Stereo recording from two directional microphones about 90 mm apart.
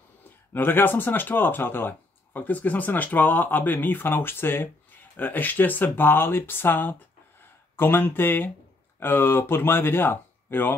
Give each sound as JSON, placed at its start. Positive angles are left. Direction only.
{"t": 0.5, "sound": "speech", "side_deg": 25}